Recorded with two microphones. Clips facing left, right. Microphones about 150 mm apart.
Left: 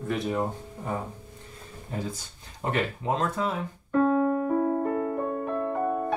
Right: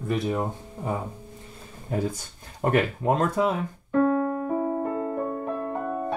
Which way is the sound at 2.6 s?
50° right (ahead or behind).